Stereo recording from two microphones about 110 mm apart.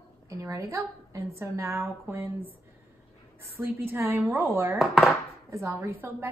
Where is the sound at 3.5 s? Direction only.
20° right (ahead or behind).